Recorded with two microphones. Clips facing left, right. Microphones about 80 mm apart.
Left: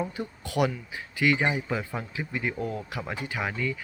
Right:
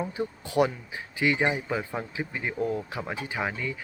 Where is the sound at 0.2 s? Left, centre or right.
Right.